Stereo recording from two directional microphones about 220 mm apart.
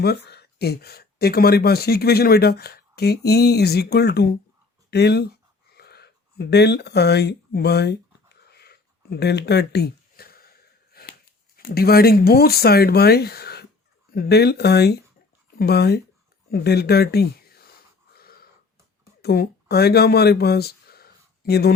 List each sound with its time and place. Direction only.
0.0 s speech: 45° left (ahead or behind)
8.4 s a sound: 45° left (ahead or behind)
11.5 s speech: 45° left (ahead or behind)
18.2 s wheeze: 45° left (ahead or behind)
19.2 s speech: 45° left (ahead or behind)